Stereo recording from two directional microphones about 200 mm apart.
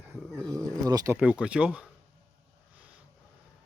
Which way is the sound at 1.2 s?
5° right (ahead or behind).